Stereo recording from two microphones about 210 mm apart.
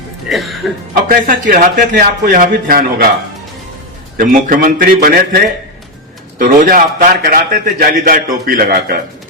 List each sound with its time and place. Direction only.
0.3 s music: centre (ahead or behind)
1.0 s a man's voice: 40° right (ahead or behind)
4.2 s a man's voice: 40° right (ahead or behind)
6.4 s a man's voice: 40° right (ahead or behind)